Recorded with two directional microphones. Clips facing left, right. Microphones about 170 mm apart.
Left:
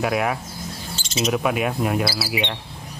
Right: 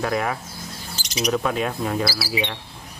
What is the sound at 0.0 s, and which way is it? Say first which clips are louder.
Speech: left 2 dB; 5° left (ahead or behind).